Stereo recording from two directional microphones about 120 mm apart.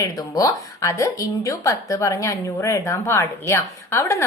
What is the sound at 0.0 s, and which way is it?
A woman's voice, 30° left (ahead or behind).